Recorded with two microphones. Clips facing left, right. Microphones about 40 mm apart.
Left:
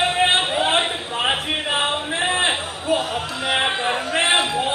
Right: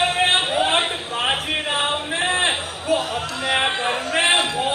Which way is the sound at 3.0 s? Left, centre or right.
Centre.